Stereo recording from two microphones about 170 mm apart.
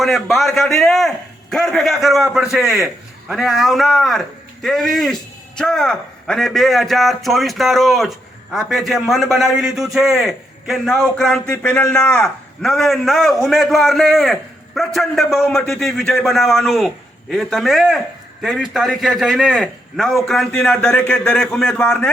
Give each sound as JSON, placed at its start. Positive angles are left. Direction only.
{"t": 0.0, "sound": "a man's voice", "side_deg": 0}